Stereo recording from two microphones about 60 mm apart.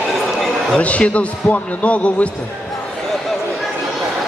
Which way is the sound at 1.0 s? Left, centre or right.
Left.